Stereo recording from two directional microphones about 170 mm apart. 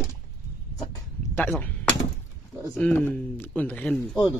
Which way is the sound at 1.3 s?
10° left (ahead or behind).